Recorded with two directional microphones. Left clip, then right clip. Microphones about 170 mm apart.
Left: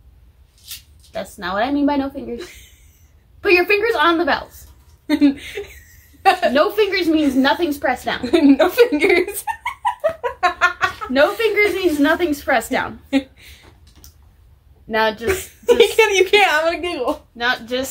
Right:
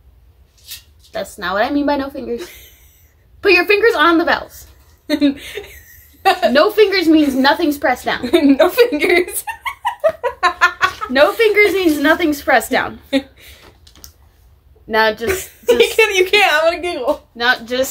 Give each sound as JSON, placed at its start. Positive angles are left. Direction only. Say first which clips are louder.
{"t": 1.1, "sound": "a woman's voice", "louder": "right 4 dB", "side_deg": -45}
{"t": 2.3, "sound": "a woman's voice", "louder": "right 5 dB", "side_deg": 0}
{"t": 3.3, "sound": "a woman's voice", "louder": "right 3 dB", "side_deg": -45}
{"t": 5.0, "sound": "a sound", "louder": "even", "side_deg": 5}
{"t": 6.5, "sound": "a woman's voice", "louder": "right 4 dB", "side_deg": -50}
{"t": 8.2, "sound": "a sound", "louder": "right 1 dB", "side_deg": 0}
{"t": 11.1, "sound": "a woman's voice", "louder": "right 4 dB", "side_deg": -45}
{"t": 13.1, "sound": "speech", "louder": "right 1 dB", "side_deg": 0}
{"t": 14.9, "sound": "a woman's voice", "louder": "right 4 dB", "side_deg": -45}
{"t": 15.2, "sound": "a woman's voice", "louder": "right 1 dB", "side_deg": 0}
{"t": 17.4, "sound": "a woman's voice", "louder": "right 5 dB", "side_deg": -45}